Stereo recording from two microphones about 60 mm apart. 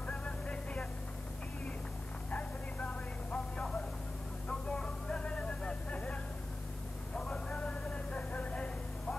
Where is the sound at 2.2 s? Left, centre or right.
Left.